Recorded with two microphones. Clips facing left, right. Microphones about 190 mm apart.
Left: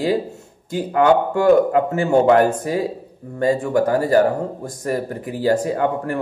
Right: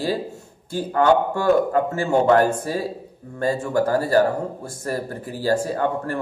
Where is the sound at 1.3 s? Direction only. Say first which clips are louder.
Left 4 dB; 20° left (ahead or behind).